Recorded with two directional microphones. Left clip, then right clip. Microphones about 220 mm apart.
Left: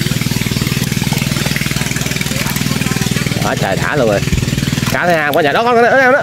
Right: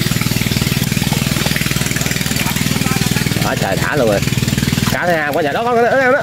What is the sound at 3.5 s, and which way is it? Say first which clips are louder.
Speech: left 3 dB; 10° left (ahead or behind).